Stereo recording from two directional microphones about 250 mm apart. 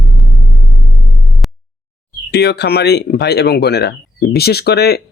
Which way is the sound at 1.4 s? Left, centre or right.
Centre.